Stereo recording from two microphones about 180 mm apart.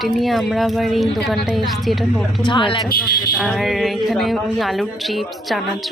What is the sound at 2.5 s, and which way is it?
Speech, 25° left (ahead or behind).